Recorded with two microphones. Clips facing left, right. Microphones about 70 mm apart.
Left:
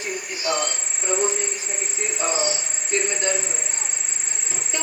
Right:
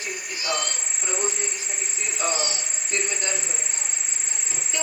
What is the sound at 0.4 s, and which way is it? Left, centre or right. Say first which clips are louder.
Insect: left 3 dB; left.